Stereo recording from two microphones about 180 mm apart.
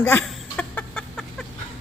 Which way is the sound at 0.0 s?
10° left (ahead or behind).